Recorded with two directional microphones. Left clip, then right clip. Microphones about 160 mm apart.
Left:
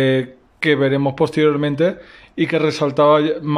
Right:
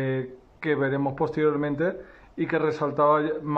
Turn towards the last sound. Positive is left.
turn(degrees=10)  # may be behind; listen again after turning